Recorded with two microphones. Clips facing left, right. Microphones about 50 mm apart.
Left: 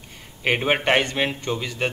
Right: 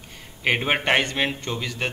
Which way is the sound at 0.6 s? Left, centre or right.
Centre.